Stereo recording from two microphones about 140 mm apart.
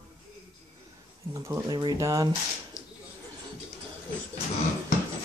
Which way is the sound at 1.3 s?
25° right (ahead or behind).